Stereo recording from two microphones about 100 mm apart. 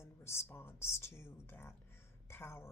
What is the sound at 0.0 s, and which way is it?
A woman's voice, 25° left (ahead or behind).